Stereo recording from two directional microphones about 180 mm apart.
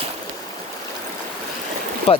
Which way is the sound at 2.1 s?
35° left (ahead or behind).